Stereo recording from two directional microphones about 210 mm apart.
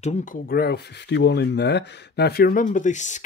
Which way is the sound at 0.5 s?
50° left (ahead or behind).